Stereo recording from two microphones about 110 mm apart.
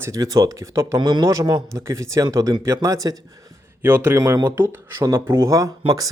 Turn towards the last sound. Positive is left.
turn(degrees=-30)  # may be behind; listen again after turning